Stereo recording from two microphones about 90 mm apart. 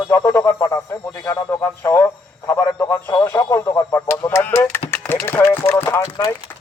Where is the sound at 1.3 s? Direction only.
30° left (ahead or behind).